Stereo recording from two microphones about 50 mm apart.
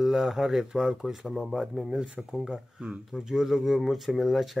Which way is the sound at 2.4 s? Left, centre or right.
Centre.